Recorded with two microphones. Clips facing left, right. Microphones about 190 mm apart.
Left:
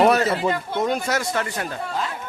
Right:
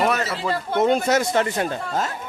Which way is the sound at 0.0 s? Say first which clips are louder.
Left 5 dB; 35° left (ahead or behind).